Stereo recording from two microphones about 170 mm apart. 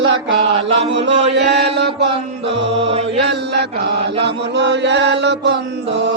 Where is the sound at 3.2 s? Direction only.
85° right.